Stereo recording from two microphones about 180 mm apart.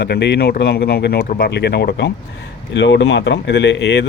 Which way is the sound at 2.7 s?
80° left.